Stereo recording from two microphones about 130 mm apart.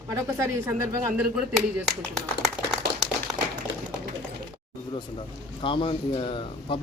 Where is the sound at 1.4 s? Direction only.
5° right (ahead or behind).